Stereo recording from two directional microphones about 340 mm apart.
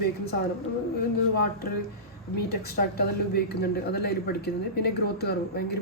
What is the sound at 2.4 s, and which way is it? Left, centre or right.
Speech, left.